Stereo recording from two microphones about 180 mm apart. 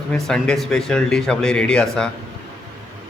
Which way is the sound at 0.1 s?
5° left (ahead or behind).